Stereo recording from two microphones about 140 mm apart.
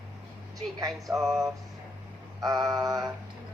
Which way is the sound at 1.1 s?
Centre (ahead or behind).